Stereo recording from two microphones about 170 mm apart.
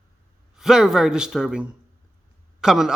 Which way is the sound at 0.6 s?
5° right (ahead or behind).